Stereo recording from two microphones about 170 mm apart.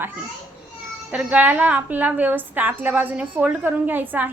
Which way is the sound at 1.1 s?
5° right (ahead or behind).